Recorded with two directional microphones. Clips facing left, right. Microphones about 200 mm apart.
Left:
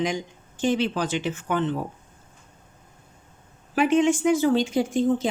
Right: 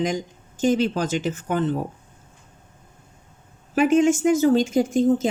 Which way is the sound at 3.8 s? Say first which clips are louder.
Right 3 dB; 45° right (ahead or behind).